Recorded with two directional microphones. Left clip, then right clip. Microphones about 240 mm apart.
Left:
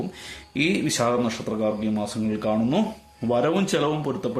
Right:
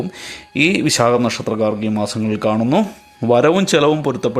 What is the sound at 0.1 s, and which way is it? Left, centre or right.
A man's voice, right.